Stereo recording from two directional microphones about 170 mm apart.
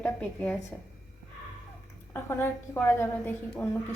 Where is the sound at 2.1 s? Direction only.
15° left (ahead or behind).